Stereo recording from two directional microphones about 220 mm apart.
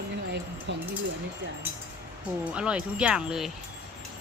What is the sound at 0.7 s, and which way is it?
Speech, 50° right (ahead or behind).